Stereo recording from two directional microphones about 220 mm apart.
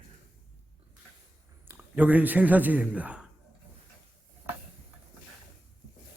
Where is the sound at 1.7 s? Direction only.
5° right (ahead or behind).